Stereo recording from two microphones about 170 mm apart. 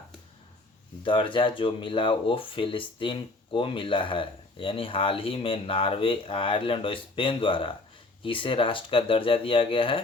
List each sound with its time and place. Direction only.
1.0 s speech: 30° left (ahead or behind)